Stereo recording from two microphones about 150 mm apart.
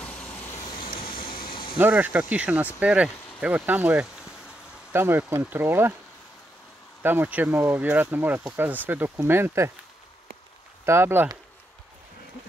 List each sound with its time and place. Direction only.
0.0 s vehicle: 5° left (ahead or behind)
1.1 s a sound: 35° left (ahead or behind)
1.8 s speech: 10° right (ahead or behind)
4.9 s speech: 15° right (ahead or behind)
7.0 s speech: 15° right (ahead or behind)
10.9 s speech: 15° right (ahead or behind)